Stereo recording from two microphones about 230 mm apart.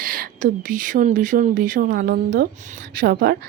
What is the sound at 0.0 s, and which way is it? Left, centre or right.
A woman's voice, right.